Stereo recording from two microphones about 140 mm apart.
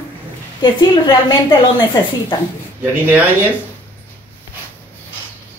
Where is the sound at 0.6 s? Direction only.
35° left (ahead or behind).